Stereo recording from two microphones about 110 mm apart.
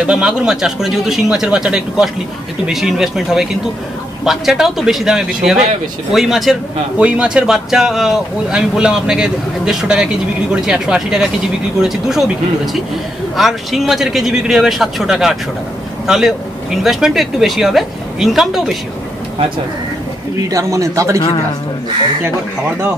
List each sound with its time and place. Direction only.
0.0 s speech: 10° right (ahead or behind)
13.4 s speech: centre (ahead or behind)
20.4 s a man's voice: 30° right (ahead or behind)